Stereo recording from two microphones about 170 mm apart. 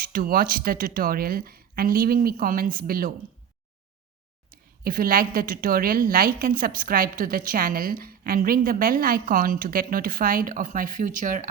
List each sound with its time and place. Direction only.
0.0 s a woman's voice: 55° right (ahead or behind)
4.5 s a woman's voice: 60° right (ahead or behind)